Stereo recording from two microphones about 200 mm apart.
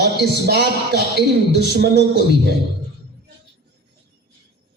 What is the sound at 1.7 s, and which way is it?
Speech, 55° right (ahead or behind).